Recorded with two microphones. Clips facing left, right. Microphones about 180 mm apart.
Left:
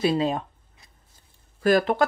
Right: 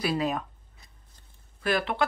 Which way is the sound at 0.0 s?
25° left (ahead or behind).